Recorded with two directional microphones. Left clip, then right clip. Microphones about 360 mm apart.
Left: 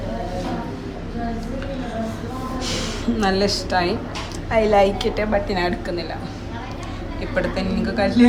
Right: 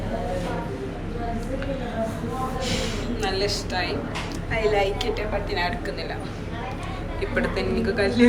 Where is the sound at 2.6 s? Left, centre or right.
Centre.